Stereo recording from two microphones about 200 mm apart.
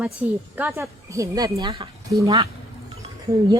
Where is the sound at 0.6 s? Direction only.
15° right (ahead or behind).